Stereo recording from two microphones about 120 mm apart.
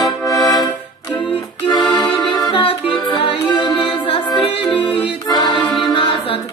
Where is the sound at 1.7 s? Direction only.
40° left (ahead or behind).